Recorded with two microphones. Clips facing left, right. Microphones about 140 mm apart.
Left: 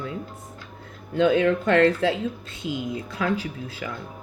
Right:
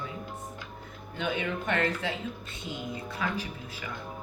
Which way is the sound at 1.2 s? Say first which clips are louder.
Left 12 dB; 90° left.